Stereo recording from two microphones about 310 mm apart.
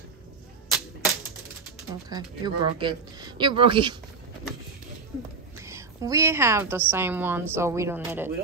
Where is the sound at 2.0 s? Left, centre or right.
Centre.